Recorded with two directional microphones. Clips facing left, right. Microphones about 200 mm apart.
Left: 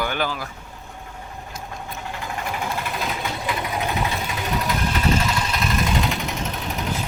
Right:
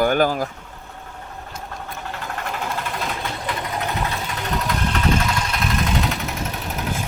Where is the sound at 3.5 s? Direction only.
10° left (ahead or behind).